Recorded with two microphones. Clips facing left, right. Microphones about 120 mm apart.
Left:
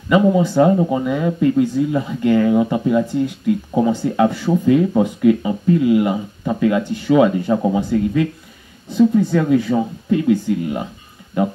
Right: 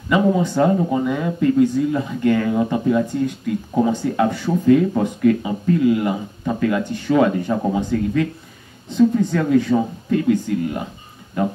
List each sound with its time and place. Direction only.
0.1 s speech: 15° left (ahead or behind)